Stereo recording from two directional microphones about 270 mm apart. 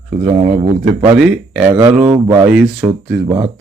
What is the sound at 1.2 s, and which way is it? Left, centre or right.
A man's voice, centre.